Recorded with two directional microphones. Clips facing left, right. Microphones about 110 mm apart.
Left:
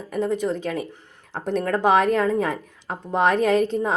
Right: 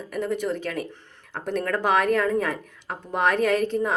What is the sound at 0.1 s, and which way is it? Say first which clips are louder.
A woman's voice: left 3 dB; 20° left (ahead or behind).